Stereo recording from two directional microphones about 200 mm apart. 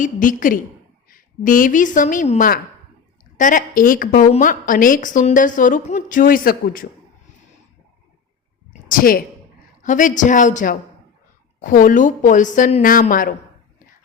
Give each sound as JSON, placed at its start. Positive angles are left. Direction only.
{"t": 0.0, "sound": "a man's voice", "side_deg": 40}
{"t": 8.9, "sound": "a man's voice", "side_deg": 45}